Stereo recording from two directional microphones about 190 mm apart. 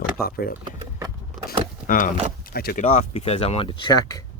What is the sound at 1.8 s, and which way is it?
Speech, 45° left (ahead or behind).